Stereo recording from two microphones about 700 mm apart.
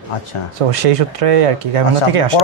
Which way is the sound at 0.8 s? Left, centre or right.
Right.